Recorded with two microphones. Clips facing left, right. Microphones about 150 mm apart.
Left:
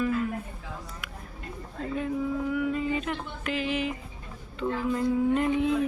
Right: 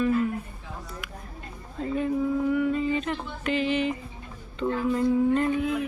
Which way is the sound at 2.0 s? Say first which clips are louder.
Right 5 dB; centre (ahead or behind).